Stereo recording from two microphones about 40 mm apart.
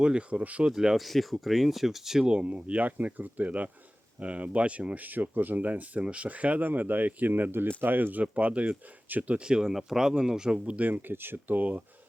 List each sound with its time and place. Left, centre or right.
0.0 s speech: right
0.9 s speech: centre
2.2 s speech: right
4.9 s speech: right
8.2 s speech: right
9.4 s speech: centre
10.7 s speech: right
11.1 s speech: right
11.5 s speech: right